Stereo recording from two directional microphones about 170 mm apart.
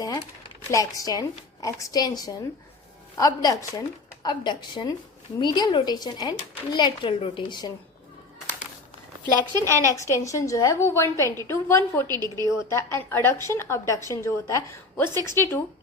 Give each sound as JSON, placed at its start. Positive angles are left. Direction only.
{"t": 0.7, "sound": "speech", "side_deg": 20}
{"t": 9.6, "sound": "a woman's voice", "side_deg": 15}
{"t": 12.0, "sound": "a woman's voice", "side_deg": -25}
{"t": 12.5, "sound": "a woman's voice", "side_deg": 15}